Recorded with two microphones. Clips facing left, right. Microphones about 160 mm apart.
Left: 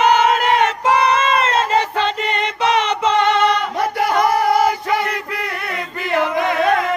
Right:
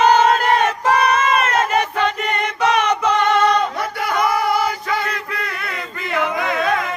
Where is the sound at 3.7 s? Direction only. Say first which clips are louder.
Left 4 dB; 40° left (ahead or behind).